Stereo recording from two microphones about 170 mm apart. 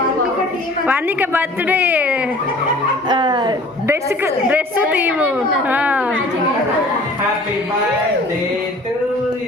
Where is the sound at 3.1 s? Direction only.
25° right (ahead or behind).